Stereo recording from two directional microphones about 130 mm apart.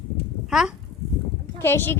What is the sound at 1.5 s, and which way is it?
Speech, 15° left (ahead or behind).